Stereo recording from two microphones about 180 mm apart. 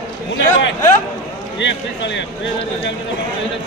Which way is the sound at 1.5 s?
85° left.